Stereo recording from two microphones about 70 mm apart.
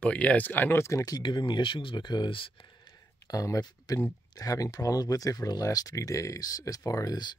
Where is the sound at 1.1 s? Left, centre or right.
Left.